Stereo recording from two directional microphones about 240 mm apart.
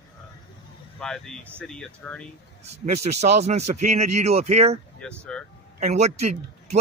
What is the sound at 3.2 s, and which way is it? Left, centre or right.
Speech, right.